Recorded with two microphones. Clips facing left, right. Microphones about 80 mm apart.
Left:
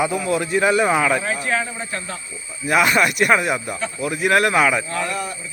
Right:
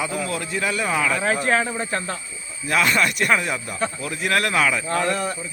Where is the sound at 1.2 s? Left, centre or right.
Right.